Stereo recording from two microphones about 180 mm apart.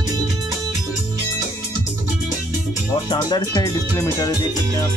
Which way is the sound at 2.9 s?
25° left (ahead or behind).